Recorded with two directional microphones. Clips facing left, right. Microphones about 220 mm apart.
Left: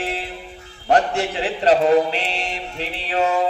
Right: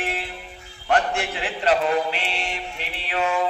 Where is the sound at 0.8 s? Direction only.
35° left (ahead or behind).